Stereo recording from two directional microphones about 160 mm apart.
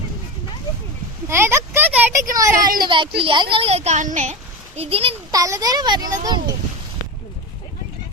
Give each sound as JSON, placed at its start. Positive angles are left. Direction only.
{"t": 1.3, "sound": "a sound", "side_deg": -15}
{"t": 2.3, "sound": "a child's voice", "side_deg": -20}
{"t": 5.3, "sound": "a child's voice", "side_deg": -20}